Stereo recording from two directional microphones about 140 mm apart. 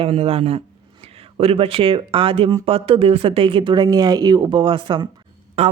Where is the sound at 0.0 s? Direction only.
45° right (ahead or behind).